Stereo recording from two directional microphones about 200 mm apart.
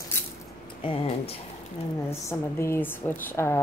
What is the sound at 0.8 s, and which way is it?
Speech, 25° left (ahead or behind).